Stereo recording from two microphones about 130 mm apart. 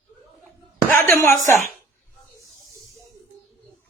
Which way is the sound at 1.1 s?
20° left (ahead or behind).